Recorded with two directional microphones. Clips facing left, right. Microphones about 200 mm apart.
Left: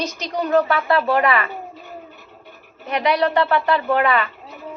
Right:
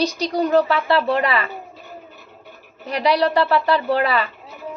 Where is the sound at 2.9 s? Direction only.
35° right (ahead or behind).